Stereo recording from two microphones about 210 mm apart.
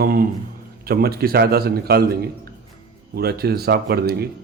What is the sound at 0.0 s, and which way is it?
Speech, 45° right (ahead or behind).